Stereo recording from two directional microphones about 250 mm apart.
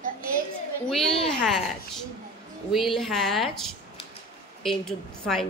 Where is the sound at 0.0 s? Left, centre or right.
Right.